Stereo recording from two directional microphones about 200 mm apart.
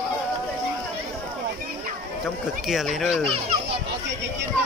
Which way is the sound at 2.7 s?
Centre (ahead or behind).